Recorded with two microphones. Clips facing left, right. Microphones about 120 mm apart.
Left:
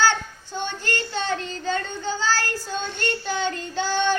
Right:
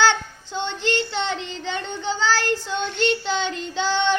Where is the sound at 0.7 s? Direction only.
20° right (ahead or behind).